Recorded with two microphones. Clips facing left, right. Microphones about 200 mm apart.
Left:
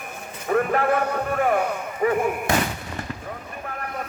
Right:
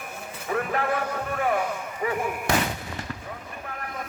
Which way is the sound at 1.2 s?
50° left (ahead or behind).